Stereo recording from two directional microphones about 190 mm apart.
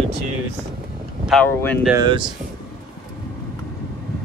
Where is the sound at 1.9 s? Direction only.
25° right (ahead or behind).